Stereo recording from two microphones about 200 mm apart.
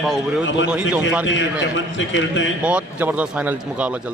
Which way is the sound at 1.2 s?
70° left (ahead or behind).